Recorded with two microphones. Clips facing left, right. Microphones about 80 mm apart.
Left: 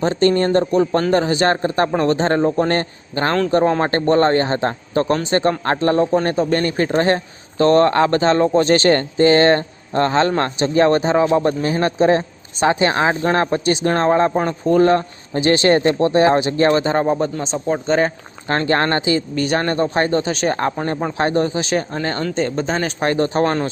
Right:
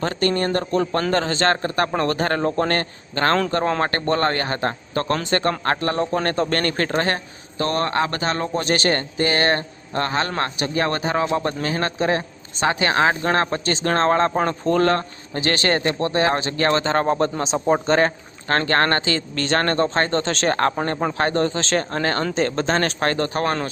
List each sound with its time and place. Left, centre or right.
0.0 s speech: left
6.2 s speech: centre
7.6 s speech: left; by 17.3 s centre
17.4 s speech: centre
18.4 s speech: centre
21.2 s speech: centre
23.0 s speech: centre